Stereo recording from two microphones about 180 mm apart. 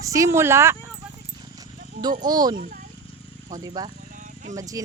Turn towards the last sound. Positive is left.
turn(degrees=-20)  # may be behind; listen again after turning